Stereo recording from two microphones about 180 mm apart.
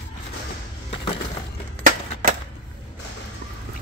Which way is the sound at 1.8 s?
50° right (ahead or behind).